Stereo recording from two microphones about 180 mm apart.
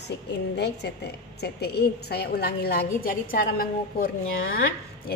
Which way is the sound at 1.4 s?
65° left (ahead or behind).